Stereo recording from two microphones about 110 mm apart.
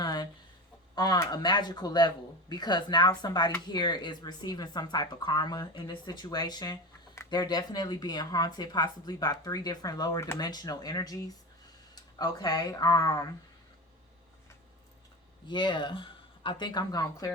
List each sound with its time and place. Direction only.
0.0 s chicken: 40° left (ahead or behind)
0.9 s speech: 40° left (ahead or behind)
15.4 s speech: 45° left (ahead or behind)